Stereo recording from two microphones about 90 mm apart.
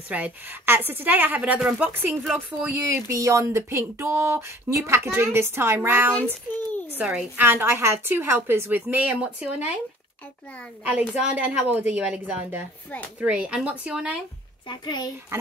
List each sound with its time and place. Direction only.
0.1 s speech: 20° right (ahead or behind)
2.8 s speech: 35° right (ahead or behind)
6.7 s a sound: 20° left (ahead or behind)
7.0 s a woman's voice: 15° right (ahead or behind)
10.9 s a woman's voice: 15° right (ahead or behind)
14.7 s a child's voice: 50° left (ahead or behind)